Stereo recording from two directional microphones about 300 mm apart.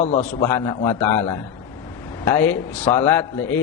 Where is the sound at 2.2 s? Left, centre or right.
Centre.